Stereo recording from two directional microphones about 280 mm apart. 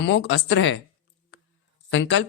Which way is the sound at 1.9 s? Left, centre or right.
Left.